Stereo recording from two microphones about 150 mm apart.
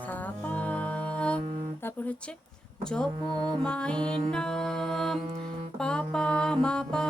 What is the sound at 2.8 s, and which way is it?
Music, 5° left (ahead or behind).